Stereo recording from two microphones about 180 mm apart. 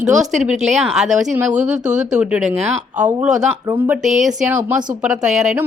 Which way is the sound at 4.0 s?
45° right (ahead or behind).